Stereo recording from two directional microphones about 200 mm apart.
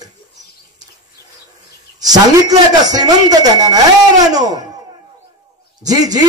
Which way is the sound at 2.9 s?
20° right (ahead or behind).